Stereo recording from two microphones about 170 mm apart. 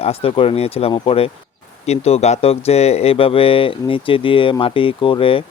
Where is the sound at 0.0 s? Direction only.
35° left (ahead or behind).